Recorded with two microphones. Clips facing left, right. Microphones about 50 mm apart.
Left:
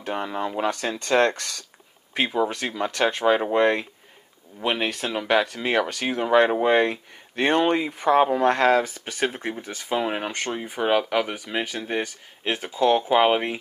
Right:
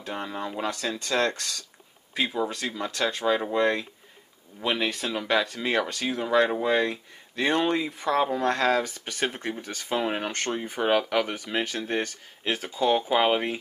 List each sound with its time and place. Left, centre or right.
0.0 s speech: left
4.6 s speech: left
7.9 s speech: left
9.2 s speech: centre